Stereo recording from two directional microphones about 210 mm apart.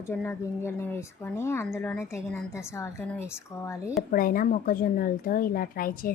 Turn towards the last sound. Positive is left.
turn(degrees=45)  # may be behind; listen again after turning